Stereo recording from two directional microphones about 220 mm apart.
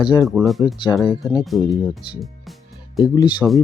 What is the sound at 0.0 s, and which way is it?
Speech, 20° left (ahead or behind).